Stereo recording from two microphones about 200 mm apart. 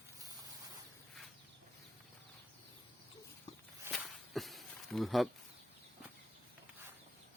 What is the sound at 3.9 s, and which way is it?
Walk, centre (ahead or behind).